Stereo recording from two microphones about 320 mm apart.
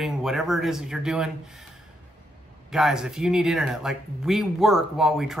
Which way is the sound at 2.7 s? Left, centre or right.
Centre.